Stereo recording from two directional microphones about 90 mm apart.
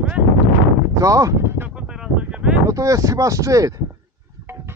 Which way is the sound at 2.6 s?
40° right (ahead or behind).